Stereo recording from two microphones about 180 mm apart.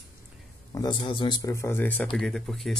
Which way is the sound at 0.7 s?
20° left (ahead or behind).